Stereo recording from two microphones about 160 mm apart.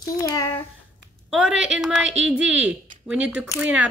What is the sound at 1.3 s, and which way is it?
A woman's voice, 5° right (ahead or behind).